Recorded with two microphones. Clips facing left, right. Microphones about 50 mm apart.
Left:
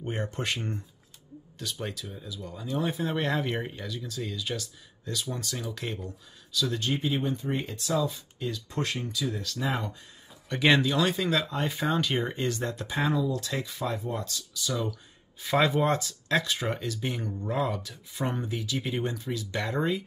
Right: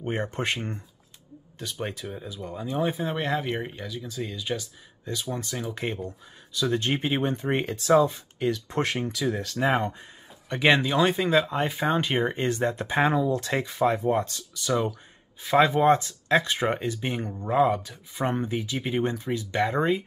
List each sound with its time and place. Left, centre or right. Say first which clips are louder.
0.0 s speech: right 4 dB; right
2.0 s speech: right 5 dB; right
9.4 s speech: right 7 dB; right
10.5 s speech: right 2 dB; centre; by 15.0 s right
15.4 s speech: right 5 dB; centre; by 20.0 s right